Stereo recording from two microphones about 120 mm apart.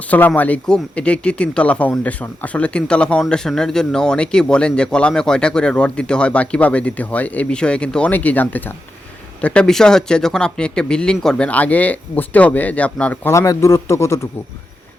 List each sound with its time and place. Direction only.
0.1 s speech: 15° left (ahead or behind)
13.3 s a man's voice: 25° left (ahead or behind)